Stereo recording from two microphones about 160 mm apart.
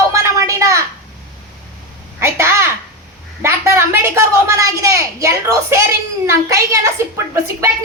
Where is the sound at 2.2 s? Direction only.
15° right (ahead or behind).